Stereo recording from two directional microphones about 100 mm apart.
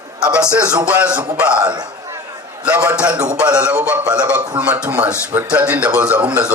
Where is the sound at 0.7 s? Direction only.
15° right (ahead or behind).